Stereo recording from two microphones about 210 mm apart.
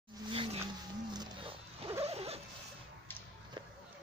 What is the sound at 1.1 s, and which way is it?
Wild animals, 20° right (ahead or behind).